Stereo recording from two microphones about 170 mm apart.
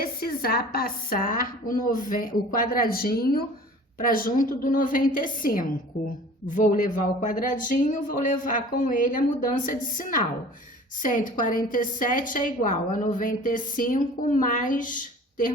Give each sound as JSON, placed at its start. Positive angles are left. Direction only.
{"t": 0.0, "sound": "a woman's voice", "side_deg": 60}
{"t": 6.0, "sound": "a woman's voice", "side_deg": 0}
{"t": 6.5, "sound": "a woman's voice", "side_deg": 50}